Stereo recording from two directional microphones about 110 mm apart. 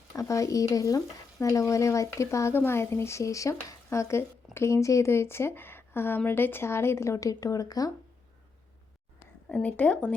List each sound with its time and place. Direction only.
0.1 s speech: 30° left (ahead or behind)
0.7 s stir: 30° left (ahead or behind)
9.5 s speech: 10° left (ahead or behind)